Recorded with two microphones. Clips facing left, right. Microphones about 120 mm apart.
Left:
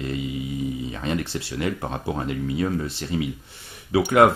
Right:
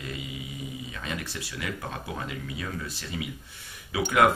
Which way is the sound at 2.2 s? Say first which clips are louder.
Left 11 dB; 45° left (ahead or behind).